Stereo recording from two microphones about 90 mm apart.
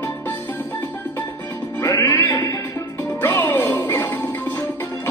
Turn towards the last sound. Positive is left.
turn(degrees=25)  # may be behind; listen again after turning